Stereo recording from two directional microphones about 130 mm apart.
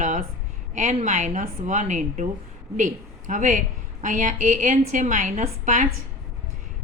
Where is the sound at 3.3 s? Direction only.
75° right (ahead or behind).